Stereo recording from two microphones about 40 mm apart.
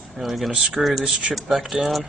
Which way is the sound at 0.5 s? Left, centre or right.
Centre.